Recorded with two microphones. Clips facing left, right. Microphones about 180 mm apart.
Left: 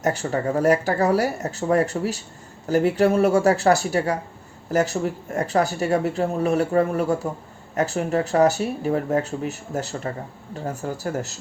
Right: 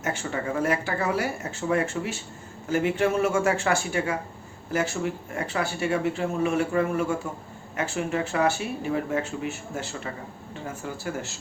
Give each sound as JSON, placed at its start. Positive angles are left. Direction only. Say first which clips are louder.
{"t": 0.0, "sound": "speech", "louder": "left 6 dB", "side_deg": 40}